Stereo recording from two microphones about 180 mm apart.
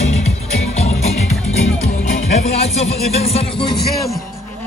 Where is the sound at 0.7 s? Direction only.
35° left (ahead or behind).